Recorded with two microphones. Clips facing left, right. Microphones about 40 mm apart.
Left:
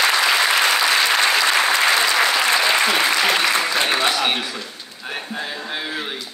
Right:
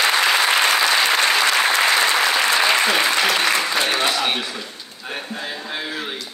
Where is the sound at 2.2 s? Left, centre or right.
Centre.